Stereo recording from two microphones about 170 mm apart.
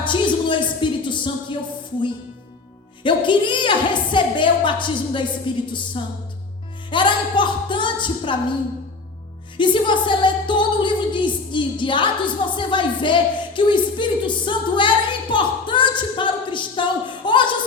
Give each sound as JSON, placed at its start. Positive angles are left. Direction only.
{"t": 0.0, "sound": "music", "side_deg": 30}
{"t": 3.0, "sound": "a woman's voice", "side_deg": 30}
{"t": 6.0, "sound": "music", "side_deg": 30}
{"t": 6.9, "sound": "a woman's voice", "side_deg": 30}
{"t": 9.6, "sound": "a woman's voice", "side_deg": 30}